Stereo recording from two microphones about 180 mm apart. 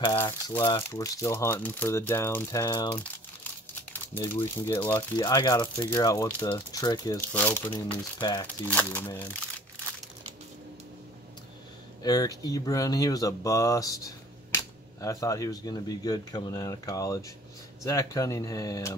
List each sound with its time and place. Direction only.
0.5 s speech: 15° left (ahead or behind)
3.9 s speech: 10° left (ahead or behind)
7.7 s speech: 20° left (ahead or behind)
8.6 s speech: 10° left (ahead or behind)
12.0 s speech: 20° left (ahead or behind)